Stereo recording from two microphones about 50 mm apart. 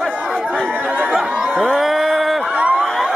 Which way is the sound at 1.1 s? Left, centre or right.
Centre.